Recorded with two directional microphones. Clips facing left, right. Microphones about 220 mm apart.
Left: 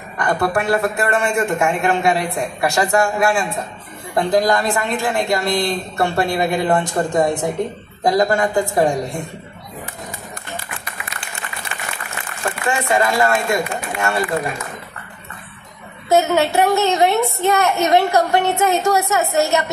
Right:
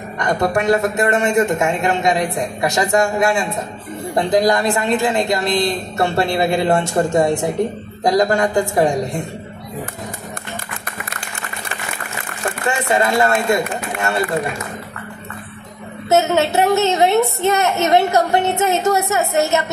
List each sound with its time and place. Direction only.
0.2 s a woman's voice: 20° right (ahead or behind)
8.0 s a woman's voice: 20° right (ahead or behind)
12.6 s a sound: 20° right (ahead or behind)
13.5 s speech: 20° right (ahead or behind)
16.1 s a woman's voice: 20° right (ahead or behind)